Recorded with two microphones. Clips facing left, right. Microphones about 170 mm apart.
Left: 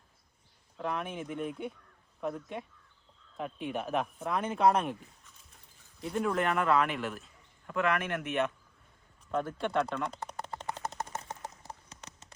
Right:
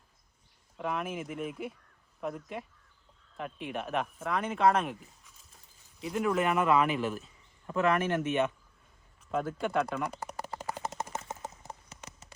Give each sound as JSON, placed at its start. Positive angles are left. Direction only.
{"t": 0.8, "sound": "speech", "side_deg": -5}
{"t": 6.6, "sound": "speech", "side_deg": -20}
{"t": 6.8, "sound": "speech", "side_deg": -5}
{"t": 7.7, "sound": "speech", "side_deg": -35}
{"t": 9.3, "sound": "a sound", "side_deg": -5}